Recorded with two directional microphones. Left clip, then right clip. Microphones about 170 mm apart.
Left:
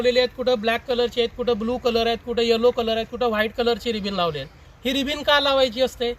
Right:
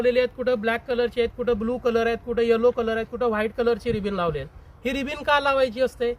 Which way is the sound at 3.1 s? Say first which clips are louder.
Left 2 dB; centre (ahead or behind).